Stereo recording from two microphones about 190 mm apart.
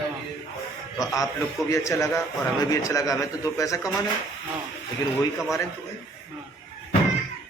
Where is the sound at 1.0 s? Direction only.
15° left (ahead or behind).